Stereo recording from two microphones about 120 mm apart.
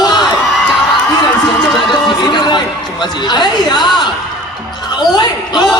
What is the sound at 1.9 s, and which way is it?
Speech, 40° left (ahead or behind).